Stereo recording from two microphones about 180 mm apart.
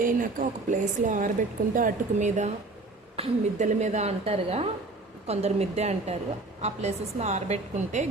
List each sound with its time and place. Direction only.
0.0 s a woman's voice: 50° right (ahead or behind)